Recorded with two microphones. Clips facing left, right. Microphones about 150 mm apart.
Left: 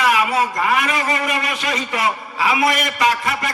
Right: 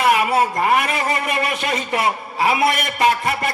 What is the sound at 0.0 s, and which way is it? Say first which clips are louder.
A man's voice: right 1 dB; 55° right (ahead or behind).